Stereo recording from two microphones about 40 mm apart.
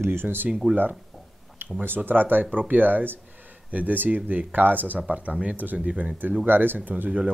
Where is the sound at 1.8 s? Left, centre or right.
Right.